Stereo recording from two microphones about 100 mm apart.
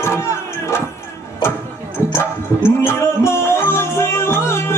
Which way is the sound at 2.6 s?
25° left (ahead or behind).